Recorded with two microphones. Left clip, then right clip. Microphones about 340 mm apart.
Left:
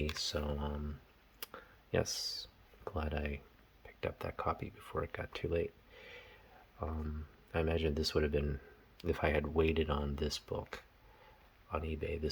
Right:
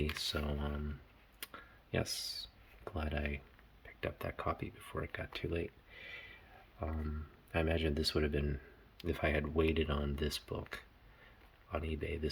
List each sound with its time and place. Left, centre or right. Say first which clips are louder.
0.0 s speech: even; centre
1.4 s clicking: even; centre
2.8 s speech: left 1 dB; centre